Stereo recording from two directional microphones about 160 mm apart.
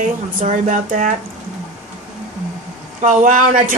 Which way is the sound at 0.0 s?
50° right (ahead or behind).